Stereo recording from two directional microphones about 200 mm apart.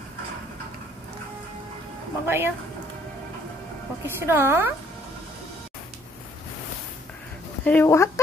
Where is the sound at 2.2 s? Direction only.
10° right (ahead or behind).